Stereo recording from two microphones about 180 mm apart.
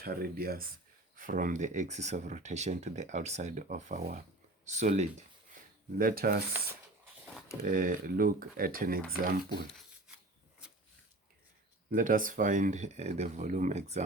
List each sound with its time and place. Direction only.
0.0 s speech: 55° right (ahead or behind); by 5.0 s 40° right (ahead or behind)
6.0 s speech: 55° right (ahead or behind)
7.6 s speech: 50° right (ahead or behind)
10.6 s a sound: 5° right (ahead or behind)
11.9 s speech: 50° right (ahead or behind)